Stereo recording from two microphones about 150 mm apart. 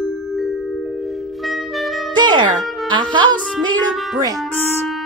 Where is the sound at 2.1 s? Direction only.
30° right (ahead or behind).